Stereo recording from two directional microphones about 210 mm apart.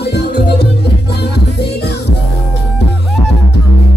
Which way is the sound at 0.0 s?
50° left (ahead or behind).